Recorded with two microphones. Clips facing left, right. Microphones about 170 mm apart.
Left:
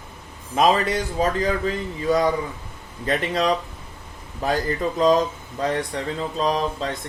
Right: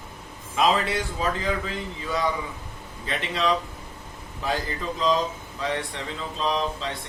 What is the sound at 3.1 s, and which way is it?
A man's voice, 45° left (ahead or behind).